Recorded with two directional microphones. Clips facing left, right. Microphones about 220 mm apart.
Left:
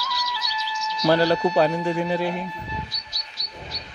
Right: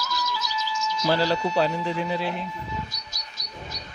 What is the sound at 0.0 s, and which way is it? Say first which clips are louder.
Music: right 2 dB; 45° right (ahead or behind).